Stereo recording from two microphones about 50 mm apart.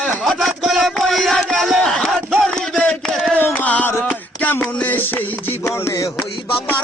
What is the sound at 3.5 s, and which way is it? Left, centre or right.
Music, left.